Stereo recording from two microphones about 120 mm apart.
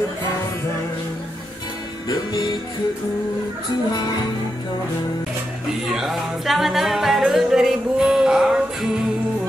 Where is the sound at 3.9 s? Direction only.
35° left (ahead or behind).